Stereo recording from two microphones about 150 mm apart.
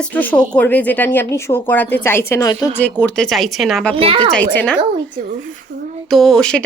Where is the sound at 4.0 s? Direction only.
40° right (ahead or behind).